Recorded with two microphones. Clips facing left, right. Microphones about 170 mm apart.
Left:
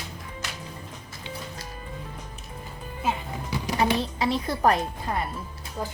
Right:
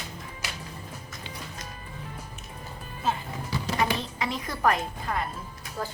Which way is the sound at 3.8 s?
30° left (ahead or behind).